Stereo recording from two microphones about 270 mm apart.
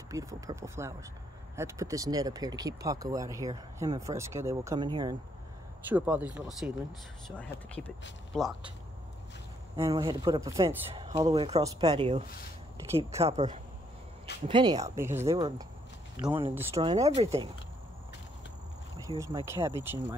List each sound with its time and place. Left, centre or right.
0.1 s speech: centre
5.9 s speech: centre
9.8 s speech: centre
15.2 s speech: right
19.1 s speech: centre